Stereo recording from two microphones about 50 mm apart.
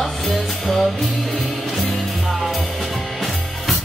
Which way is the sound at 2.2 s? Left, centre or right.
Centre.